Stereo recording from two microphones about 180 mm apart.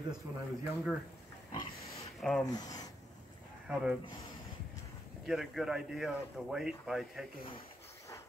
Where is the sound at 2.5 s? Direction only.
20° left (ahead or behind).